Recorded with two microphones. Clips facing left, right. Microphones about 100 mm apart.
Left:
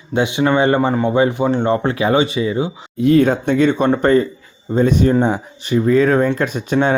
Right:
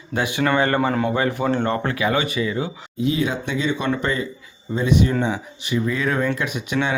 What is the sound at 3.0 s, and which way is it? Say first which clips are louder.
Speech: left 9 dB; 55° left (ahead or behind).